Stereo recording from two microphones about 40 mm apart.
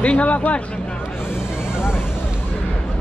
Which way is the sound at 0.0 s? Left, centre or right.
Left.